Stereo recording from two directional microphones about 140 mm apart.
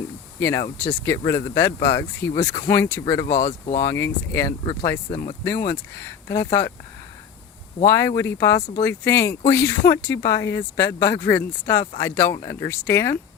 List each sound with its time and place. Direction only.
0.3 s speech: 20° left (ahead or behind)
1.2 s speech: 30° left (ahead or behind)
1.5 s speech: 20° left (ahead or behind)
3.3 s speech: 55° left (ahead or behind)
3.8 s speech: 20° left (ahead or behind)
4.6 s speech: 35° left (ahead or behind)
5.6 s speech: 20° left (ahead or behind)
7.9 s speech: 20° left (ahead or behind)